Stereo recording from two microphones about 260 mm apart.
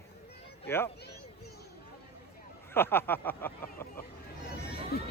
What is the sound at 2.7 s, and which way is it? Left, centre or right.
Speech, centre.